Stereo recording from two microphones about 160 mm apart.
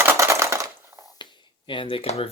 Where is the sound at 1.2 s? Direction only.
30° left (ahead or behind).